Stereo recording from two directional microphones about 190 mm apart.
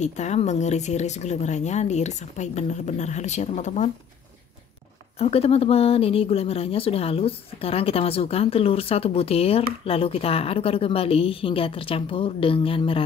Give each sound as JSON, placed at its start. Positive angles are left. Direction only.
{"t": 0.0, "sound": "speech", "side_deg": 40}
{"t": 5.2, "sound": "speech", "side_deg": 30}